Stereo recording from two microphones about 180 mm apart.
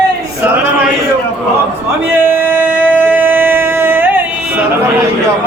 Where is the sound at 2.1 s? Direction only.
10° right (ahead or behind).